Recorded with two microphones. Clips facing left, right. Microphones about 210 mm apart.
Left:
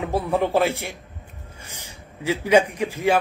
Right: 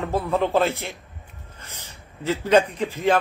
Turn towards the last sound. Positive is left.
turn(degrees=10)  # may be behind; listen again after turning